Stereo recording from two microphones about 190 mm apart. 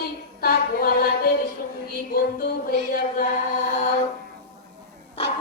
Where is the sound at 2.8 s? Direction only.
45° left (ahead or behind).